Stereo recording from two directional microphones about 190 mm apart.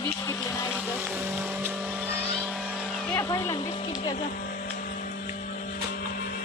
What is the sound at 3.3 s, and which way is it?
Speech, 15° left (ahead or behind).